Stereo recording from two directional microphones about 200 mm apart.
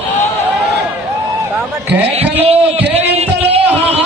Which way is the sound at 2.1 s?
30° right (ahead or behind).